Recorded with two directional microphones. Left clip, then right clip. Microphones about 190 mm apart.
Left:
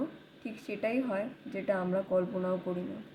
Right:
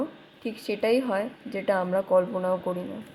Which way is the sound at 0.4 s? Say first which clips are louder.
Right 9 dB; 10° right (ahead or behind).